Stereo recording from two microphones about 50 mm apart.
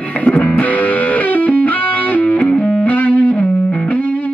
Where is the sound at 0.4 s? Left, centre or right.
Left.